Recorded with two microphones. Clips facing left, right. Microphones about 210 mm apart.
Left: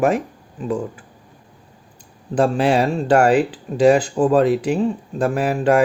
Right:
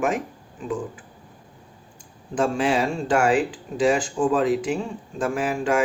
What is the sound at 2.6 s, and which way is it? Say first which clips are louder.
Speech: left 5 dB; 60° left (ahead or behind).